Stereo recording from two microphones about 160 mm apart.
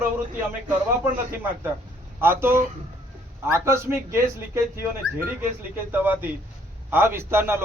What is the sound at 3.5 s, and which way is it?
A man's voice, 15° right (ahead or behind).